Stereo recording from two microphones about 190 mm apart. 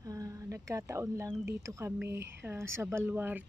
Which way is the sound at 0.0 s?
20° right (ahead or behind).